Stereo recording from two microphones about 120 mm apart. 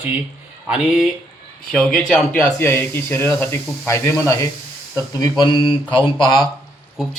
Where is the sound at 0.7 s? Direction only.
5° right (ahead or behind).